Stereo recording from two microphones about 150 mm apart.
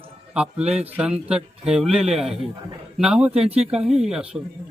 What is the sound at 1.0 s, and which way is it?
A man's voice, 5° right (ahead or behind).